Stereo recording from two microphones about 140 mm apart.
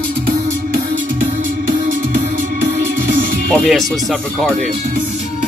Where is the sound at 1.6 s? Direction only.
70° right (ahead or behind).